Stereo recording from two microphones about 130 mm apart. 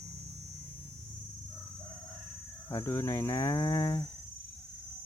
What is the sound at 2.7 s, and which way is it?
Speech, 20° left (ahead or behind).